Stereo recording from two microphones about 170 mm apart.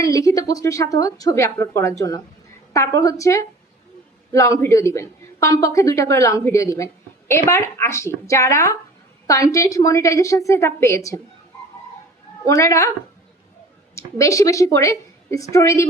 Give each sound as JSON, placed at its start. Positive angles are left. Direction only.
{"t": 0.0, "sound": "speech", "side_deg": 20}
{"t": 12.5, "sound": "speech", "side_deg": 20}
{"t": 13.9, "sound": "speech", "side_deg": 20}